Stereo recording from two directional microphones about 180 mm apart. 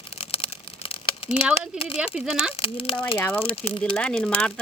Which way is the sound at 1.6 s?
30° left (ahead or behind).